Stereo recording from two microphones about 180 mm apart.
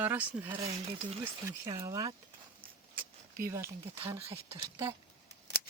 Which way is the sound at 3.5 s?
15° right (ahead or behind).